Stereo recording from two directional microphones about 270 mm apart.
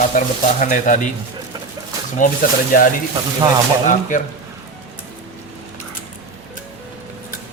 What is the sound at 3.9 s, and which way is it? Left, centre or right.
Speech, left.